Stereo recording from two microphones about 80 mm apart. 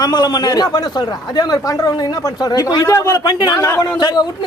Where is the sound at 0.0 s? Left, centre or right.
Left.